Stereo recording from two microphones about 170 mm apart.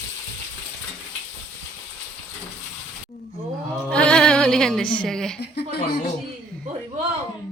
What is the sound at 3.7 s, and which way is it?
Music, 5° left (ahead or behind).